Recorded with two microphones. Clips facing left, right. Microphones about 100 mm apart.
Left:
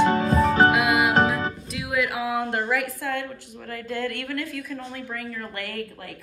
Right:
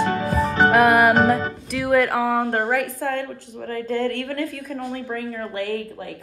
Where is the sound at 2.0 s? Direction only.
45° right (ahead or behind).